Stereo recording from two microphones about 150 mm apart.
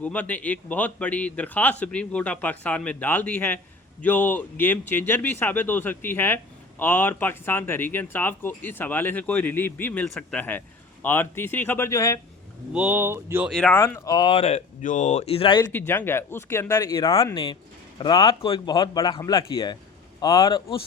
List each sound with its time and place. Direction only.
0.0 s speech: 10° left (ahead or behind)
12.7 s speech: 10° right (ahead or behind)
13.5 s speech: 5° left (ahead or behind)
13.7 s speech: 20° left (ahead or behind); by 14.6 s 40° left (ahead or behind)
14.8 s speech: 60° left (ahead or behind); by 15.6 s 35° left (ahead or behind)
15.9 s speech: 15° left (ahead or behind)
17.3 s speech: 35° left (ahead or behind)